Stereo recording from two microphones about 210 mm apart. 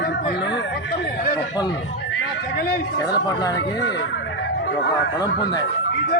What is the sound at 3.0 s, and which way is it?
Speech, 20° left (ahead or behind).